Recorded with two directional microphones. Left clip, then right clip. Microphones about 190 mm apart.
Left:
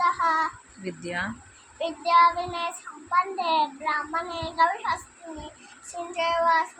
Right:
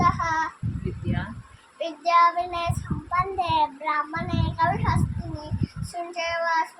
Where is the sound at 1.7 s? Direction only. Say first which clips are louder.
Even; 20° right (ahead or behind).